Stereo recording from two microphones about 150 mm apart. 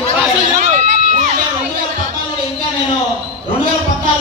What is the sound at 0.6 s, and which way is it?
Crowd, 55° right (ahead or behind).